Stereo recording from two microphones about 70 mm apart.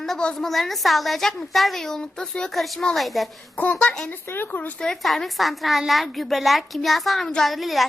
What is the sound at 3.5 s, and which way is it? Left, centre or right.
Speech, centre.